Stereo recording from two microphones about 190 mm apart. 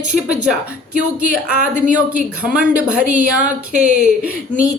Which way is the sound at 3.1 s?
45° right (ahead or behind).